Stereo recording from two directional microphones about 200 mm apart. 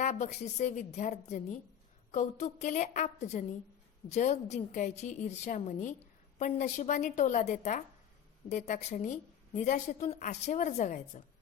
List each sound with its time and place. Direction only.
0.0 s a woman's voice: 35° left (ahead or behind)